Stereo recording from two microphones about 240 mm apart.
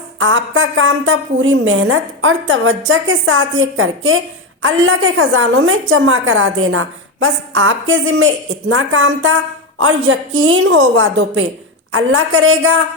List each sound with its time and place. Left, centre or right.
0.2 s a woman's voice: right